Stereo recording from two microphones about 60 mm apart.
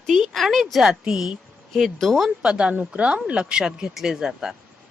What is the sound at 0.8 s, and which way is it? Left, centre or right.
Speech, centre.